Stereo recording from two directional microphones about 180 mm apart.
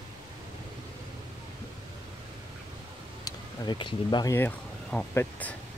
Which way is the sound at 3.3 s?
25° left (ahead or behind).